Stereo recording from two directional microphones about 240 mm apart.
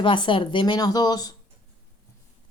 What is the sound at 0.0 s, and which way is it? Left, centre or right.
Speech, left.